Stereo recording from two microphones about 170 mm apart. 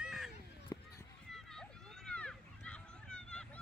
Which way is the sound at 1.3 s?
5° left (ahead or behind).